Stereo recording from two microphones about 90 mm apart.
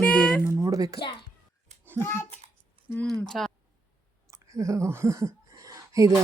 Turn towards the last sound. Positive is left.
turn(degrees=-40)  # may be behind; listen again after turning